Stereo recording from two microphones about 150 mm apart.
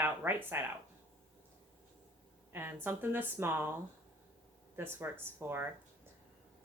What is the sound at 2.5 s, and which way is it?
A woman's voice, 15° right (ahead or behind).